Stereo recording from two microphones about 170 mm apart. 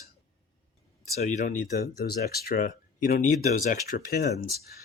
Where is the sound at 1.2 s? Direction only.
45° left (ahead or behind).